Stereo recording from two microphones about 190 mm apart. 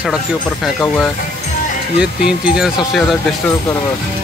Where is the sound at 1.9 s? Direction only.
5° right (ahead or behind).